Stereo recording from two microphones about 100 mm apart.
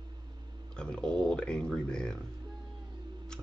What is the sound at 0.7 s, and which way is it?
Speech, 10° left (ahead or behind).